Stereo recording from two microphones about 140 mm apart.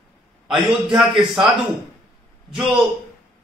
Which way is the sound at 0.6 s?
Centre (ahead or behind).